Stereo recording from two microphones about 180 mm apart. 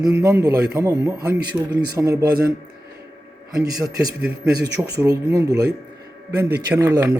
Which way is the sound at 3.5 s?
20° right (ahead or behind).